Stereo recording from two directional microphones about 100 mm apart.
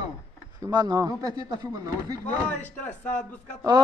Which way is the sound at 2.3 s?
15° left (ahead or behind).